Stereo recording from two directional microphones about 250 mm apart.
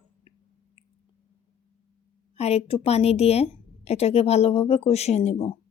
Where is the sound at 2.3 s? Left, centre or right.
Left.